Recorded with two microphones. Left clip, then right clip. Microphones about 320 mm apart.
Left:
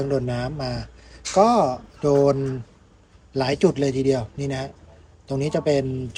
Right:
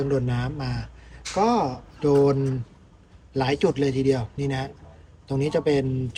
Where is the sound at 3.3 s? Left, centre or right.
Centre.